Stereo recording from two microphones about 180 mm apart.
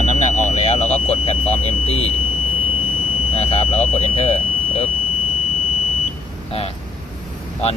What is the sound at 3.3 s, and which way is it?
Speech, 35° left (ahead or behind).